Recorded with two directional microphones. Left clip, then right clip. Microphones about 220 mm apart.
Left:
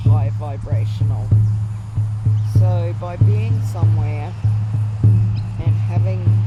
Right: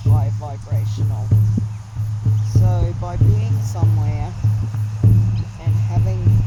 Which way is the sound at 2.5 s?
20° left (ahead or behind).